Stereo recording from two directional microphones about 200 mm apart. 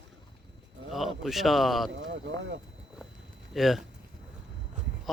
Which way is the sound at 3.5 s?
Centre (ahead or behind).